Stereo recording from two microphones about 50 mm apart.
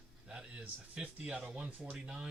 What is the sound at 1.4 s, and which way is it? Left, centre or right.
Speech, right.